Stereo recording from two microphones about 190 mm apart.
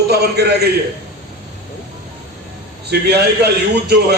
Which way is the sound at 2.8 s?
60° right (ahead or behind).